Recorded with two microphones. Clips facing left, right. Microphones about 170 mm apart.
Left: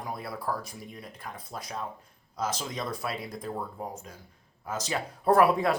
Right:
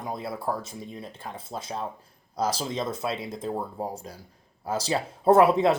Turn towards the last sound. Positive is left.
turn(degrees=-25)  # may be behind; listen again after turning